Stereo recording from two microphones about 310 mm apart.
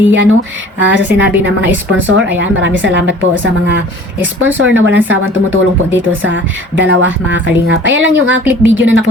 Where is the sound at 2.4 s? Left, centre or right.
Right.